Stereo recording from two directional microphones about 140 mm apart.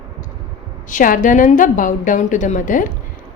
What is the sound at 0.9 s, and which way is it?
A woman's voice, 70° left (ahead or behind).